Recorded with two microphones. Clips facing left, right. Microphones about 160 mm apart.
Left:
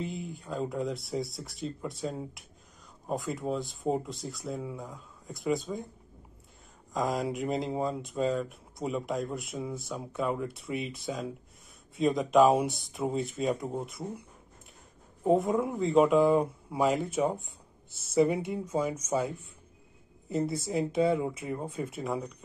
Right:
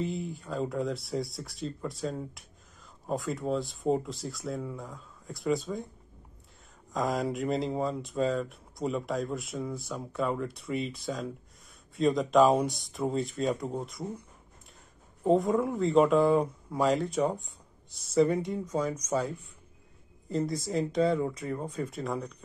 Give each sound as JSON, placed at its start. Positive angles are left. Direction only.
{"t": 0.0, "sound": "speech", "side_deg": 0}
{"t": 6.9, "sound": "speech", "side_deg": 0}
{"t": 15.2, "sound": "speech", "side_deg": 0}